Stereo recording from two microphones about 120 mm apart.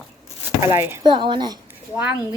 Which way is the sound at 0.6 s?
20° right (ahead or behind).